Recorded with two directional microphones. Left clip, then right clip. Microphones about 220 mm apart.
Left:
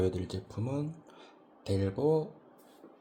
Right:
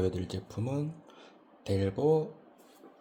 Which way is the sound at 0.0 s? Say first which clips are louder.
Even; centre (ahead or behind).